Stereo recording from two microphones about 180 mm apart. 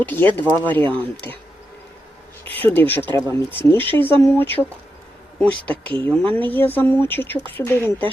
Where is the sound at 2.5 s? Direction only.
10° left (ahead or behind).